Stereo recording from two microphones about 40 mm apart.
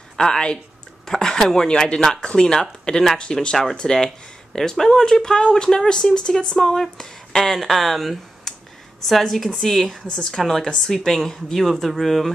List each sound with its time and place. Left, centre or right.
0.2 s speech: centre
8.5 s clicking: centre
9.0 s speech: centre